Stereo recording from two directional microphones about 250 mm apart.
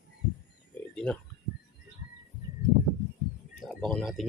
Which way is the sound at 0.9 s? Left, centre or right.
Centre.